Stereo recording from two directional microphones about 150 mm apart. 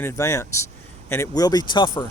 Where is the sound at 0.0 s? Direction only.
20° left (ahead or behind).